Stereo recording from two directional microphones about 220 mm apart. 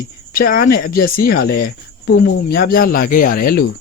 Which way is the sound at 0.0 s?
40° left (ahead or behind).